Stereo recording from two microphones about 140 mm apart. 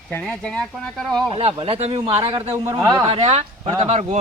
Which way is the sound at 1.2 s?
45° right (ahead or behind).